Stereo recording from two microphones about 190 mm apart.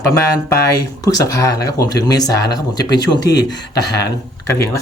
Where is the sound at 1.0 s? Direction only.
20° left (ahead or behind).